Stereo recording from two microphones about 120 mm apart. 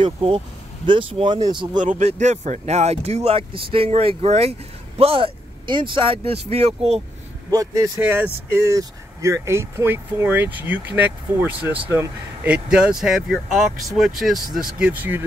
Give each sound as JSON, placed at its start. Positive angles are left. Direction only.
{"t": 0.0, "sound": "speech", "side_deg": -45}
{"t": 1.8, "sound": "speech", "side_deg": -85}
{"t": 7.5, "sound": "speech", "side_deg": -30}
{"t": 8.0, "sound": "speech", "side_deg": -20}
{"t": 14.9, "sound": "speech", "side_deg": -15}